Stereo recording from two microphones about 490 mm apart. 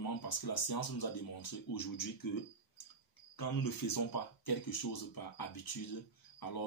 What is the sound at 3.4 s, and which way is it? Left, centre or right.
Speech, left.